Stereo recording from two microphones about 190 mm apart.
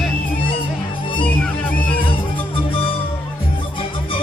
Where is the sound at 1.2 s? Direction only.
10° left (ahead or behind).